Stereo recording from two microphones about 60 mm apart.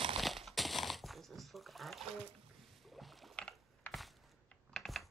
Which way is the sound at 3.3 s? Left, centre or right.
Centre.